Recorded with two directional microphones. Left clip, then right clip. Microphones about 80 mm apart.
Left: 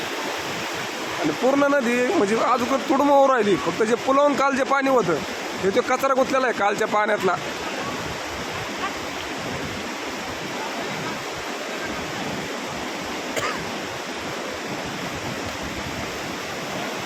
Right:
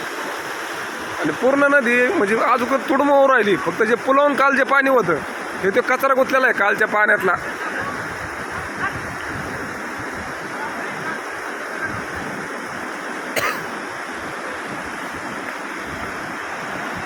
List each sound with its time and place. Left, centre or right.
1.5 s a man's voice: centre
3.0 s a man's voice: centre